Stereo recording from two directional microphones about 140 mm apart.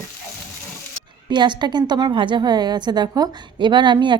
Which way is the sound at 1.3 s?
30° right (ahead or behind).